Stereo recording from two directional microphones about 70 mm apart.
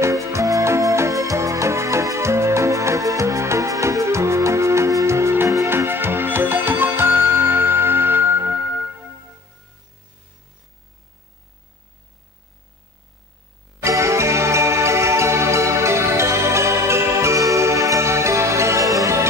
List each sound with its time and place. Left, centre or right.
0.0 s music: right
13.8 s music: right